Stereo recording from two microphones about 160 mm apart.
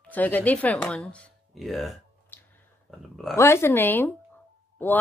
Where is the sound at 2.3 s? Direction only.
10° left (ahead or behind).